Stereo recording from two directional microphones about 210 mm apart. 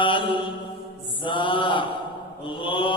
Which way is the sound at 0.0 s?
25° left (ahead or behind).